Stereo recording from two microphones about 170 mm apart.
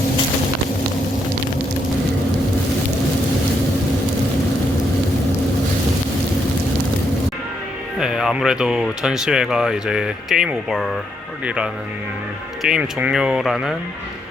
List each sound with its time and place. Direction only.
7.9 s a man's voice: 5° right (ahead or behind)